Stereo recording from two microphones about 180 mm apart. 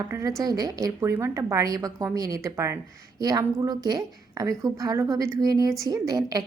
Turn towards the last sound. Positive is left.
turn(degrees=-20)  # may be behind; listen again after turning